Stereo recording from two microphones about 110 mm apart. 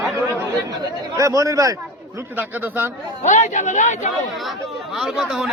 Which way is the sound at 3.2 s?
90° left.